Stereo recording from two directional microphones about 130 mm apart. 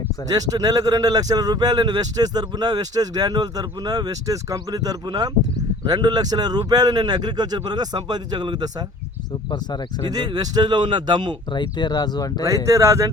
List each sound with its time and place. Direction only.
0.3 s speech: 30° right (ahead or behind)
10.1 s speech: 30° right (ahead or behind)
11.5 s speech: 35° left (ahead or behind)
12.6 s speech: 25° right (ahead or behind)